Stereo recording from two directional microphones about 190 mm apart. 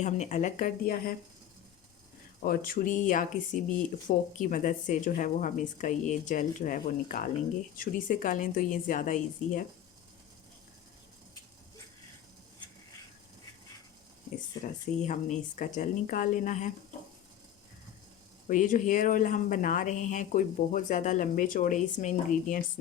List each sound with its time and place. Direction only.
0.0 s speech: 40° left (ahead or behind)
2.4 s speech: 50° left (ahead or behind)
15.0 s speech: 40° left (ahead or behind)
18.4 s speech: 45° left (ahead or behind)